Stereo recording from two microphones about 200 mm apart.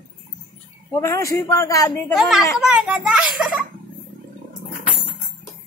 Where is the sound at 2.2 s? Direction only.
Centre (ahead or behind).